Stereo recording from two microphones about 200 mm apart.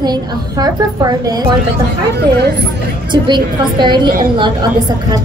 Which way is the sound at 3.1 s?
25° right (ahead or behind).